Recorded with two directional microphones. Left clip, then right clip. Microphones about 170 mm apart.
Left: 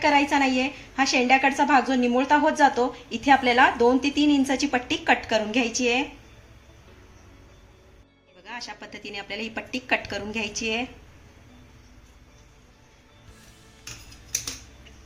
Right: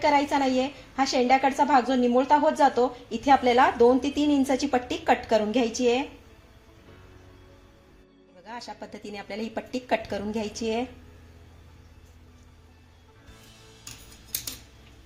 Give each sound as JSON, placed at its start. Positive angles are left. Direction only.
{"t": 0.0, "sound": "a woman's voice", "side_deg": -30}
{"t": 8.4, "sound": "a woman's voice", "side_deg": -35}